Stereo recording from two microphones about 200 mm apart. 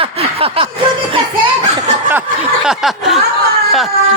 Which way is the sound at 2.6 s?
Centre (ahead or behind).